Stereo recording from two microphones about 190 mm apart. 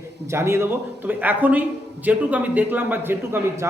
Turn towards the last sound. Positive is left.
turn(degrees=-10)  # may be behind; listen again after turning